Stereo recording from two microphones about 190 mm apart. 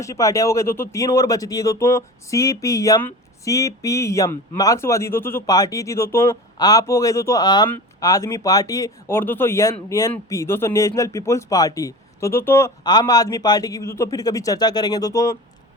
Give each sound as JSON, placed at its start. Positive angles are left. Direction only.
{"t": 0.0, "sound": "speech", "side_deg": 15}